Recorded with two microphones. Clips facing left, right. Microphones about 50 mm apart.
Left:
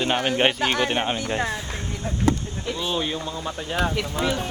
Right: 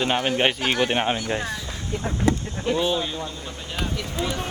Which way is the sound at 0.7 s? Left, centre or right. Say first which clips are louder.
Right 1 dB; centre.